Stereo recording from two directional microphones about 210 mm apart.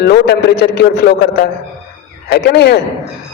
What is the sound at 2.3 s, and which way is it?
Speech, 50° left (ahead or behind).